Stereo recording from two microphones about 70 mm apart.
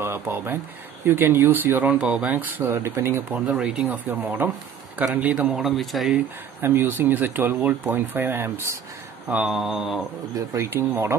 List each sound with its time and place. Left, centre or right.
0.0 s speech: right; by 2.3 s centre
2.3 s speech: right
3.3 s speech: centre
3.8 s speech: right
5.5 s speech: centre
6.6 s speech: right
9.4 s speech: centre
10.3 s speech: right
10.7 s speech: right